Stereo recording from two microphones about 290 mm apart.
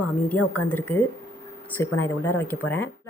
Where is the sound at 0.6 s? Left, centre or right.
Centre.